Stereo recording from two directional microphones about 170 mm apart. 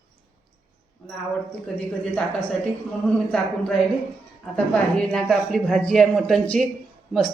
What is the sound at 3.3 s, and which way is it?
Speech, 5° left (ahead or behind).